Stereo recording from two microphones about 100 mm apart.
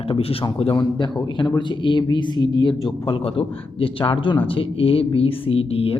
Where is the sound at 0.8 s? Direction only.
50° left (ahead or behind).